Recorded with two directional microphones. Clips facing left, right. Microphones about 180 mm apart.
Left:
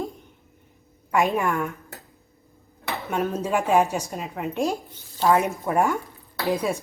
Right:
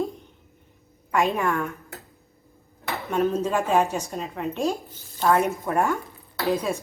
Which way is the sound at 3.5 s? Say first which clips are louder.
Left 1 dB; 15° left (ahead or behind).